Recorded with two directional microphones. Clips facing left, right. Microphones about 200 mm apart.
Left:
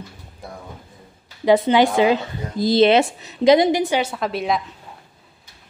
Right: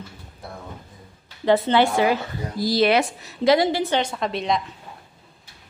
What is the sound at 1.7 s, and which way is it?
A woman's voice, 15° left (ahead or behind).